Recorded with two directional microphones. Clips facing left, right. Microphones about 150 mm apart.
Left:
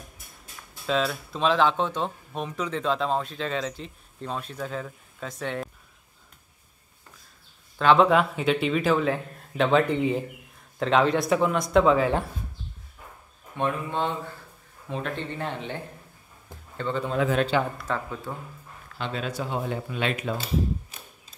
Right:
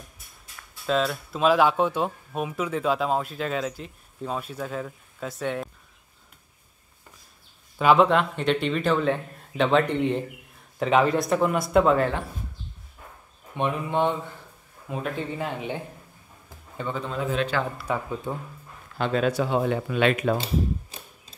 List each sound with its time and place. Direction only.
0.8 s speech: centre (ahead or behind)
7.8 s speech: 5° right (ahead or behind)
8.1 s speech: 5° left (ahead or behind)
13.6 s speech: 15° right (ahead or behind)
14.9 s a man's voice: 5° right (ahead or behind)
18.9 s speech: 50° right (ahead or behind)
19.3 s speech: 85° right; by 20.3 s 60° right (ahead or behind)